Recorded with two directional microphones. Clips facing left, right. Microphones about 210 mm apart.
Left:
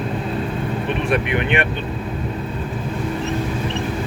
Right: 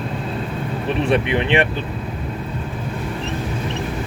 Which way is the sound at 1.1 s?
30° right (ahead or behind).